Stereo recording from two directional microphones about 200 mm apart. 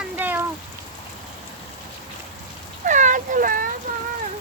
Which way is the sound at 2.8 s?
40° right (ahead or behind).